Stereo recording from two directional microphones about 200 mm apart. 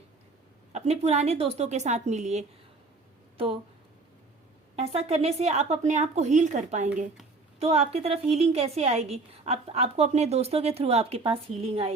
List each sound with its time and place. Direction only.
0.7 s a woman's voice: 30° right (ahead or behind)
4.8 s a woman's voice: 30° right (ahead or behind)